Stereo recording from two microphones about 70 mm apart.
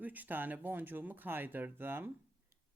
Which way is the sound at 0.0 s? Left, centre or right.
Right.